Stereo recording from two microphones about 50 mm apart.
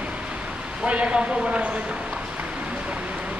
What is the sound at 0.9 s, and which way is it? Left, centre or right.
Speech, right.